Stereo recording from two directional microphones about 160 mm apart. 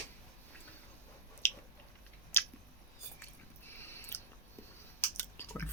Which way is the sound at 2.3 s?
15° left (ahead or behind).